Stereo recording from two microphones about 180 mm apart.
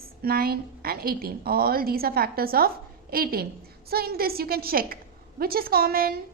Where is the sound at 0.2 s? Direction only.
55° right (ahead or behind).